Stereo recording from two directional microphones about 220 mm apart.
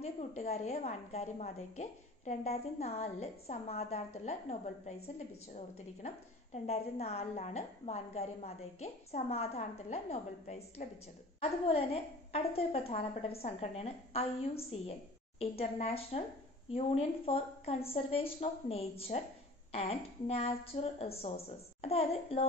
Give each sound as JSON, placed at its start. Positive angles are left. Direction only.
{"t": 0.0, "sound": "a woman's voice", "side_deg": 30}